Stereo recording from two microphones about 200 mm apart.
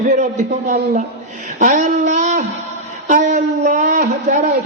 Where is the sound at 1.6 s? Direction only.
40° right (ahead or behind).